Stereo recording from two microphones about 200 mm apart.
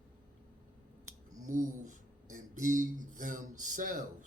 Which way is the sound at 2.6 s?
40° right (ahead or behind).